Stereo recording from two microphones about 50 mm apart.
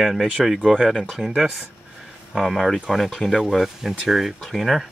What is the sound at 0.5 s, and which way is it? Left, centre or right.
Speech, centre.